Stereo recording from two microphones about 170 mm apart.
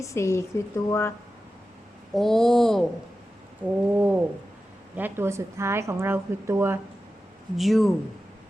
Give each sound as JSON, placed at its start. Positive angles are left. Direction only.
{"t": 0.0, "sound": "speech", "side_deg": 15}
{"t": 2.1, "sound": "speech", "side_deg": 0}
{"t": 3.6, "sound": "a woman's voice", "side_deg": -10}
{"t": 7.5, "sound": "speech", "side_deg": 0}